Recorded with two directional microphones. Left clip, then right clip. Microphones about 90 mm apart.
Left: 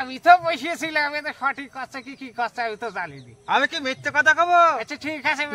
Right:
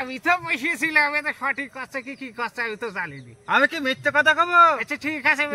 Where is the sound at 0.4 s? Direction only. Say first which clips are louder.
Right 1 dB; 35° left (ahead or behind).